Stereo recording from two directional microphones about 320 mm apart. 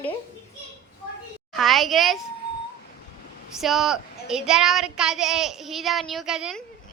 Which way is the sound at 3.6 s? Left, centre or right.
Centre.